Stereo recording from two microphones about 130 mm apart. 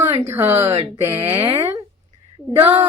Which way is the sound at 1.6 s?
20° right (ahead or behind).